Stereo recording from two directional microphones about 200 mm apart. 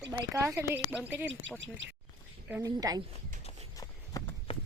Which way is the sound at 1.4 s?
65° right (ahead or behind).